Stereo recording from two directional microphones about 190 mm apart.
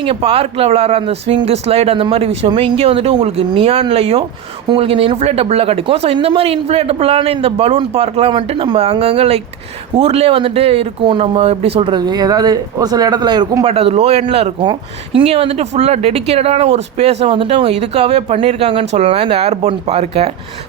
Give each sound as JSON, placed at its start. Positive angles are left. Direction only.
{"t": 0.0, "sound": "speech", "side_deg": -30}
{"t": 13.7, "sound": "speech", "side_deg": -30}